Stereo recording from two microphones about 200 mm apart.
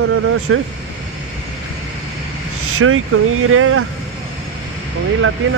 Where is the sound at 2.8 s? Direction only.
90° right.